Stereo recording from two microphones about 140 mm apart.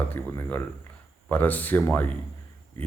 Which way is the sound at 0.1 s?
20° left (ahead or behind).